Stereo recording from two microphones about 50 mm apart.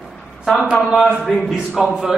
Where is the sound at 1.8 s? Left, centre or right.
Centre.